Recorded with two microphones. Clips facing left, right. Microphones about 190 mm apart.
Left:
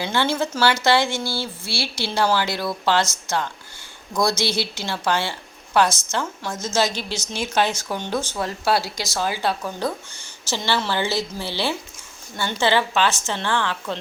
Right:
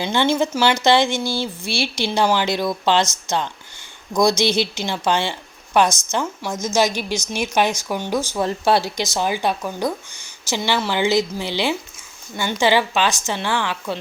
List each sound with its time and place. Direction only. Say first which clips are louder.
0.0 s a woman's voice: right 4 dB; 20° right (ahead or behind)
8.4 s a woman's voice: right 4 dB; 20° right (ahead or behind)